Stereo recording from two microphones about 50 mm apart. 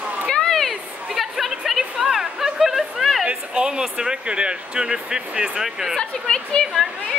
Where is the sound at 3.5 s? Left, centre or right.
Centre.